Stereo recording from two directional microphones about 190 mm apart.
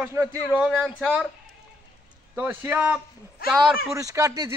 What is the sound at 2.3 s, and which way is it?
Speech, 10° right (ahead or behind).